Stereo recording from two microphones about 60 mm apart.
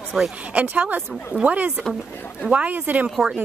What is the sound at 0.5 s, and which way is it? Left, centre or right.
A woman's voice, right.